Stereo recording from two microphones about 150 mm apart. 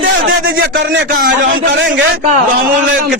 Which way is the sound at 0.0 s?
80° right.